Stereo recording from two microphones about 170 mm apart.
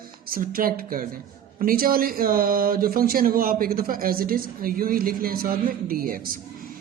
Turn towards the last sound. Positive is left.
turn(degrees=-55)  # may be behind; listen again after turning